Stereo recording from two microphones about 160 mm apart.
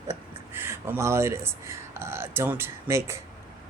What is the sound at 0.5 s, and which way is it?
Speech, 15° right (ahead or behind).